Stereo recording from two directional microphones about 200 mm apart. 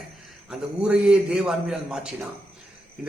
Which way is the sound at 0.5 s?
5° right (ahead or behind).